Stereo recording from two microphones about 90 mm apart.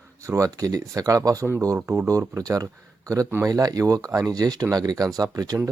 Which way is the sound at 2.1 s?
40° right (ahead or behind).